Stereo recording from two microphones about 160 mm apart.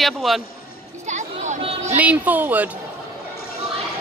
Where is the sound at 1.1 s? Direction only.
50° right (ahead or behind).